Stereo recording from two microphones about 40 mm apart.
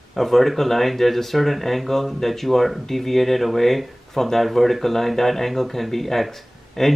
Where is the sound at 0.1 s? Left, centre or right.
Centre.